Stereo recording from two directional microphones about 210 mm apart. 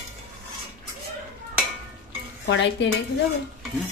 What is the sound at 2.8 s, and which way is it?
Stir, 55° left (ahead or behind).